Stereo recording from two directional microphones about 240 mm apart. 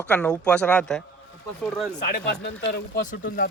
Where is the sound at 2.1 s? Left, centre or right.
Left.